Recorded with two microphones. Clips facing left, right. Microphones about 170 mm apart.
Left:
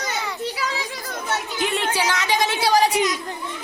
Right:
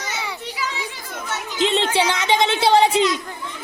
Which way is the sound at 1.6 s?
25° right (ahead or behind).